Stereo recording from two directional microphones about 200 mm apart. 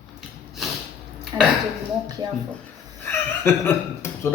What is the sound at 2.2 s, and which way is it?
Speech, 20° right (ahead or behind).